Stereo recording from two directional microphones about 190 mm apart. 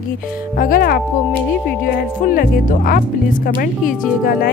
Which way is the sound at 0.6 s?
50° left (ahead or behind).